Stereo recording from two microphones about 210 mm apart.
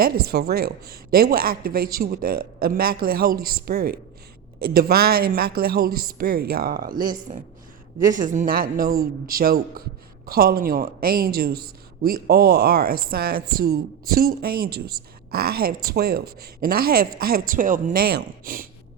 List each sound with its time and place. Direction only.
0.0 s a woman's voice: 45° right (ahead or behind)